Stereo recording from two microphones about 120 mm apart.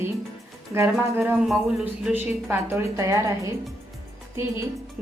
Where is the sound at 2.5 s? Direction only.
20° right (ahead or behind).